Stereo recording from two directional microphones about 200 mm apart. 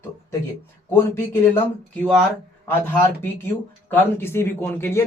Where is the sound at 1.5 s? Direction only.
5° left (ahead or behind).